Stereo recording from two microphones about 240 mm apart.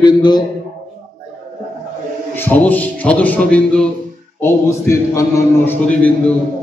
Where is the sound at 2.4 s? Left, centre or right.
Centre.